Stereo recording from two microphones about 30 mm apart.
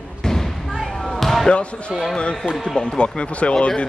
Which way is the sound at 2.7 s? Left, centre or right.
Left.